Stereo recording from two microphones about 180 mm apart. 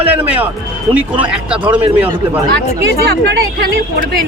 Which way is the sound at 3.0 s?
65° right (ahead or behind).